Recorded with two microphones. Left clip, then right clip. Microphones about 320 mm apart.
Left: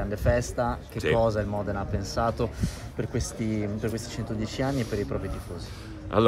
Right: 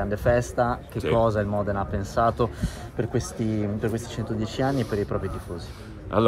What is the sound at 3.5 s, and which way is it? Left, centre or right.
Speech, centre.